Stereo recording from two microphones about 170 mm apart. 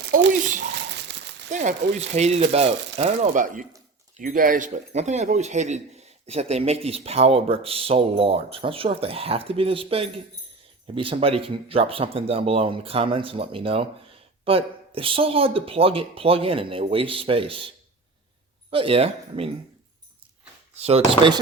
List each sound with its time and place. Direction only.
0.0 s a sound: 70° right (ahead or behind)
0.8 s crumpling: 90° right
1.5 s speech: 45° right (ahead or behind)
18.7 s speech: 35° right (ahead or behind)
20.7 s speech: 35° right (ahead or behind)